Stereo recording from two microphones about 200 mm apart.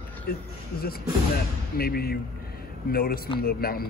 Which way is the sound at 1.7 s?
50° left (ahead or behind).